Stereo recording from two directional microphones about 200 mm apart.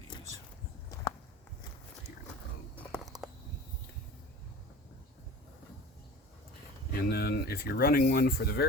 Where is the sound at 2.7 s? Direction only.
Centre (ahead or behind).